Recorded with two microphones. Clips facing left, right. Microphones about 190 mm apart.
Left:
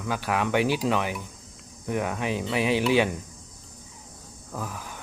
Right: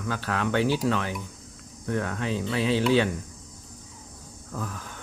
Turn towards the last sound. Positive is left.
turn(degrees=10)  # may be behind; listen again after turning